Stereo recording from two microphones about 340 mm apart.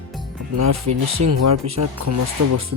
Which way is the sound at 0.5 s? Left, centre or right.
Right.